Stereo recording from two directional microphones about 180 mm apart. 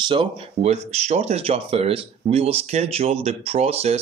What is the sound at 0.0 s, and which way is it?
Speech, 30° right (ahead or behind).